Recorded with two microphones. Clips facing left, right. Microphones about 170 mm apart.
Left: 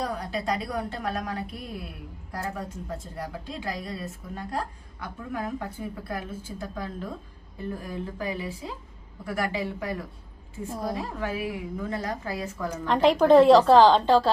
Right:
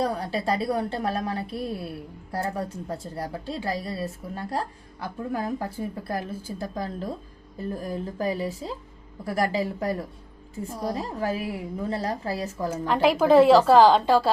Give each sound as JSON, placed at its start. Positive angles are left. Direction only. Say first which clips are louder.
{"t": 0.0, "sound": "a woman's voice", "louder": "right 4 dB", "side_deg": -30}
{"t": 2.9, "sound": "a woman's voice", "louder": "right 3 dB", "side_deg": -35}
{"t": 10.7, "sound": "a woman's voice", "louder": "right 1 dB", "side_deg": 0}
{"t": 10.9, "sound": "a woman's voice", "louder": "right 3 dB", "side_deg": -40}
{"t": 12.9, "sound": "a woman's voice", "louder": "left 1 dB", "side_deg": -5}